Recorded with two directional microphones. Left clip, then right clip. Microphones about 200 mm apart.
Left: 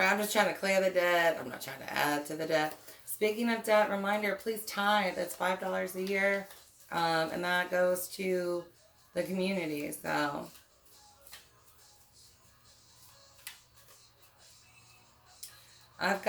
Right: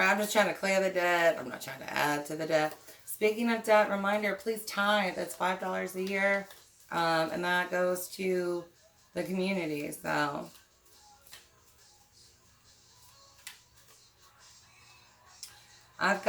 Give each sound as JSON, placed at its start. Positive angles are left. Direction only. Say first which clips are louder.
{"t": 0.0, "sound": "speech", "louder": "right 1 dB", "side_deg": -10}